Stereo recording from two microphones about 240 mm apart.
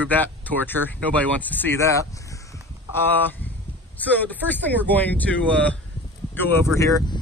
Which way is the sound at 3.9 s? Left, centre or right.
Centre.